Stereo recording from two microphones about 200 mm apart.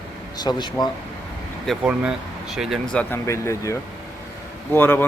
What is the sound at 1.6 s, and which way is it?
A man's voice, 5° right (ahead or behind).